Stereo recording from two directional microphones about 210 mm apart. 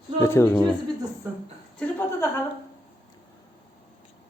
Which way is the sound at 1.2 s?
10° right (ahead or behind).